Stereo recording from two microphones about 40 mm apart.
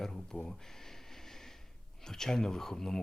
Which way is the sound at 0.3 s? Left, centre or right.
Left.